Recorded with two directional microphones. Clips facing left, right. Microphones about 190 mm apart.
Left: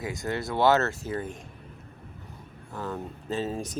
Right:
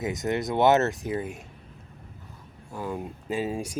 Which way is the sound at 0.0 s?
20° right (ahead or behind).